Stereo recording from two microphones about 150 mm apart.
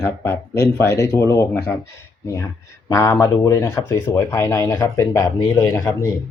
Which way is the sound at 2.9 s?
20° left (ahead or behind).